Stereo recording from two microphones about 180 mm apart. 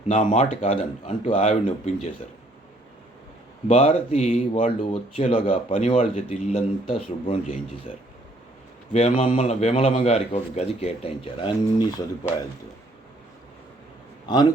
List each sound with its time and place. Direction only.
0.1 s speech: 45° left (ahead or behind)
3.7 s speech: 35° left (ahead or behind)
8.9 s speech: 40° left (ahead or behind); by 12.0 s 20° left (ahead or behind)